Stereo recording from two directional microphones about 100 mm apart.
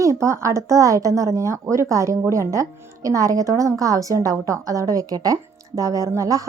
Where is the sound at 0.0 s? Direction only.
30° right (ahead or behind).